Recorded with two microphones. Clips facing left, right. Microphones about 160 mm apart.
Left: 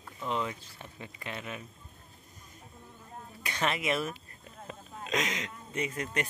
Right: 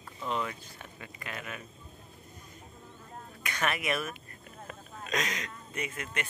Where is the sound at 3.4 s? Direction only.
25° left (ahead or behind).